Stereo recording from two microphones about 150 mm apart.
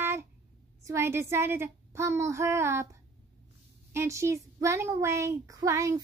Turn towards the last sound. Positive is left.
turn(degrees=-20)  # may be behind; listen again after turning